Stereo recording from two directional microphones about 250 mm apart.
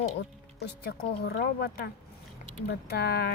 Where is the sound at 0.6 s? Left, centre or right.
Left.